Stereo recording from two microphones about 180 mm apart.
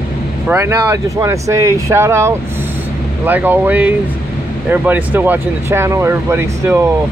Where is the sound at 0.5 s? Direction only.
15° right (ahead or behind).